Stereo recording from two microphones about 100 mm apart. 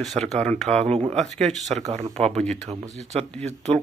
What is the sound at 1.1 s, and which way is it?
Speech, 5° left (ahead or behind).